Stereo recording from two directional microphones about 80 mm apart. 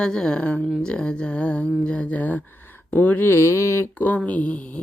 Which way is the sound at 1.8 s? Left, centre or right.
Centre.